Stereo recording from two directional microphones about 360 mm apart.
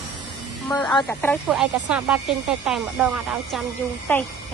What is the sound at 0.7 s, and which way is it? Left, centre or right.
A woman's voice, centre.